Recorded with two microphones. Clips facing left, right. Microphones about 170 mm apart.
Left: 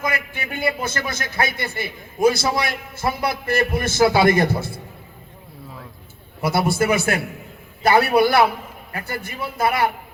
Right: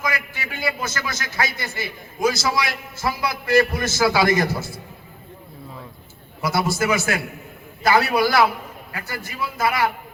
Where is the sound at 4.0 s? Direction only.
25° left (ahead or behind).